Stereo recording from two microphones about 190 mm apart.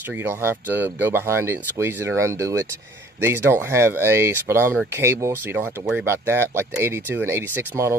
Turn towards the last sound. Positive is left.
turn(degrees=-10)  # may be behind; listen again after turning